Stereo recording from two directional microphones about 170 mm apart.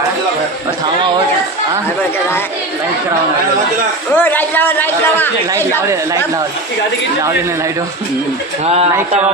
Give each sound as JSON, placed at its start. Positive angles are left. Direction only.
{"t": 4.1, "sound": "a man's voice", "side_deg": 10}